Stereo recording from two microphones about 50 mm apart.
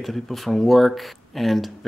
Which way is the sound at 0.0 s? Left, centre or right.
Centre.